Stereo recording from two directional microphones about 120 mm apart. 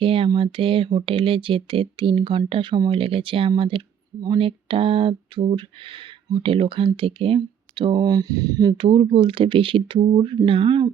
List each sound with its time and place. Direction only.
0.0 s a sound: 50° right (ahead or behind)
0.3 s speech: 45° right (ahead or behind); by 8.7 s 30° right (ahead or behind)
8.8 s speech: 45° right (ahead or behind)